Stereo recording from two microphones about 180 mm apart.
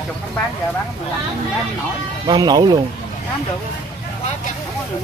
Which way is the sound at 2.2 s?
20° right (ahead or behind).